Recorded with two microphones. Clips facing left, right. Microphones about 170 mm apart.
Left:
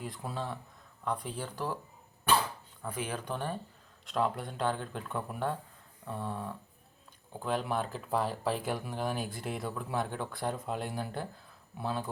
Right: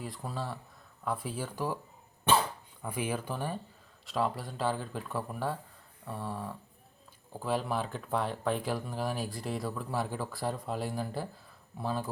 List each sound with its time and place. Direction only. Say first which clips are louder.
0.0 s speech: even; centre (ahead or behind)
2.3 s dog: right 2 dB; 25° right (ahead or behind)
2.8 s speech: right 3 dB; 10° right (ahead or behind)